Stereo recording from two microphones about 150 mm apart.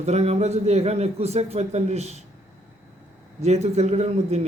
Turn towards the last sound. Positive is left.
turn(degrees=-45)  # may be behind; listen again after turning